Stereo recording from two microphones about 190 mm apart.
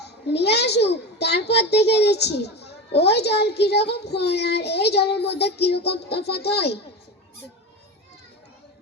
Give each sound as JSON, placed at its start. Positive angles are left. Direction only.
{"t": 0.0, "sound": "a child's voice", "side_deg": 60}